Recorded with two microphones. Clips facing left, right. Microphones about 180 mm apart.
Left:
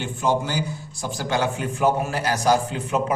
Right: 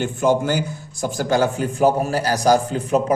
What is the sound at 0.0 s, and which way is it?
A man's voice, 50° right (ahead or behind).